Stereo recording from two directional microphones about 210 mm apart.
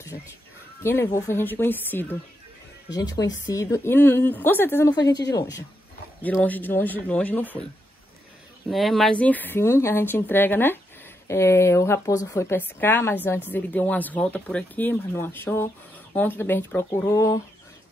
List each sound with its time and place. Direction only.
0.8 s speech: 10° left (ahead or behind)
6.2 s speech: 5° left (ahead or behind)
8.6 s speech: centre (ahead or behind); by 17.4 s 15° left (ahead or behind)